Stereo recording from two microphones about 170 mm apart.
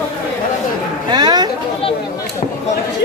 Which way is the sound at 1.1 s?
25° right (ahead or behind).